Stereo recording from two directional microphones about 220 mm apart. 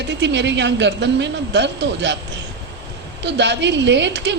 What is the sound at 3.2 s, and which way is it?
A woman's voice, 50° right (ahead or behind).